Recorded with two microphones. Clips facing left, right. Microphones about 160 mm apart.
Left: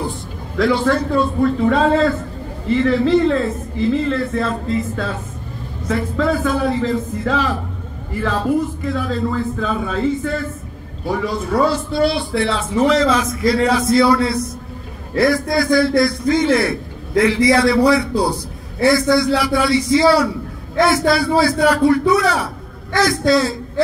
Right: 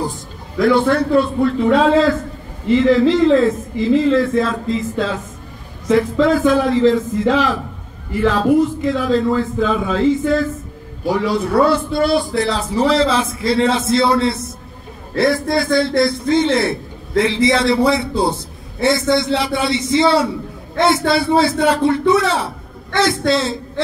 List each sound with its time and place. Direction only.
0.6 s a man's voice: 55° right (ahead or behind)
1.8 s speech: 90° right
5.9 s speech: 90° right
11.2 s a man's voice: 55° right (ahead or behind); by 23.5 s 25° right (ahead or behind)